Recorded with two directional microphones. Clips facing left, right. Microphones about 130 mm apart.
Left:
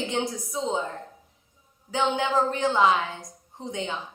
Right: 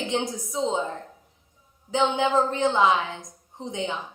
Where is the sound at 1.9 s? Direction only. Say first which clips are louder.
Right 2 dB; 20° right (ahead or behind).